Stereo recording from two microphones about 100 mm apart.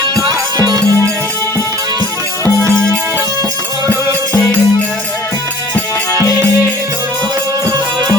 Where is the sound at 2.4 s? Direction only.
25° left (ahead or behind).